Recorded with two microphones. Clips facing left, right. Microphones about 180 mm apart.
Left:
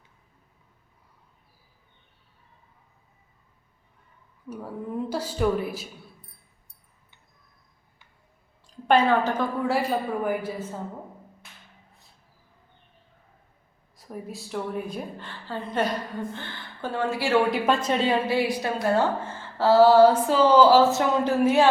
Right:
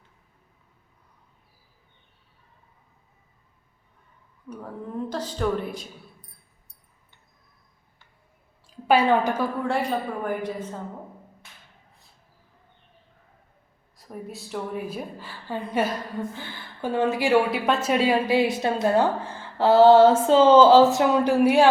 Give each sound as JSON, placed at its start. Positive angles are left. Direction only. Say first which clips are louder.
{"t": 4.4, "sound": "a woman's voice", "louder": "left 2 dB", "side_deg": 5}
{"t": 8.6, "sound": "a woman's voice", "louder": "even", "side_deg": -5}
{"t": 9.6, "sound": "a woman's voice", "louder": "left 1 dB", "side_deg": 5}
{"t": 13.9, "sound": "a woman's voice", "louder": "even", "side_deg": 0}
{"t": 17.5, "sound": "a woman's voice", "louder": "even", "side_deg": -5}
{"t": 18.3, "sound": "speech", "louder": "right 3 dB", "side_deg": -20}